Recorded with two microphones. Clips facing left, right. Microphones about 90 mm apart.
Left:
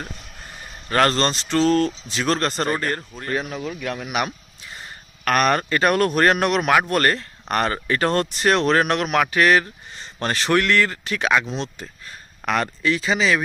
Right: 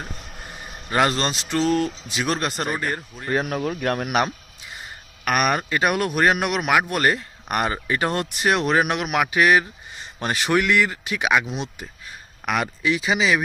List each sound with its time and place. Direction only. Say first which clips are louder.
0.9 s speech: left 2 dB; 10° right (ahead or behind)
3.5 s speech: right 4 dB; 50° right (ahead or behind)
5.2 s speech: left 2 dB; 5° right (ahead or behind)